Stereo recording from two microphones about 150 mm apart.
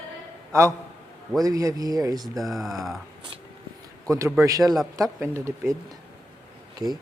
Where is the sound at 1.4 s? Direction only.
25° right (ahead or behind).